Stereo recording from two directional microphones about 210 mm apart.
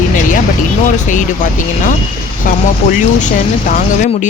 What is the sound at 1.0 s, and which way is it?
Speech, 35° left (ahead or behind).